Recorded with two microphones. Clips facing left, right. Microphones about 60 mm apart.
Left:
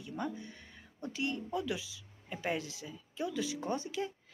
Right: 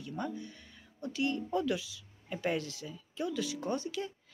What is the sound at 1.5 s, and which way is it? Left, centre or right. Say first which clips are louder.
Speech: right 4 dB; centre.